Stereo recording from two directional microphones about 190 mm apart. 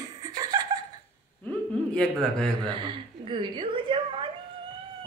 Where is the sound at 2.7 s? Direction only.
25° right (ahead or behind).